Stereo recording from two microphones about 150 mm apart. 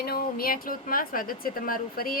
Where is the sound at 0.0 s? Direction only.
85° left.